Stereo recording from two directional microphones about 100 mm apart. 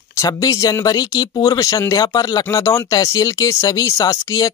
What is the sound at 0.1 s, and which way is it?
Speech, 35° left (ahead or behind).